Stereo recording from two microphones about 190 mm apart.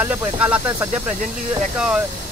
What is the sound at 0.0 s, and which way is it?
Speech, 10° right (ahead or behind).